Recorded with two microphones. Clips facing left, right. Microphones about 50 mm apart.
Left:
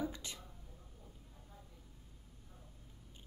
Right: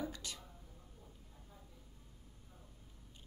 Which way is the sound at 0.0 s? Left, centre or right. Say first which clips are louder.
Left 2 dB; centre.